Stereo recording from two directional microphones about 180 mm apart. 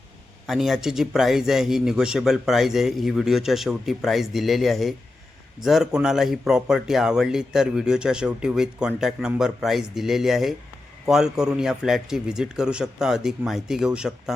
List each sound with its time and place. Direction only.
0.4 s a man's voice: centre (ahead or behind)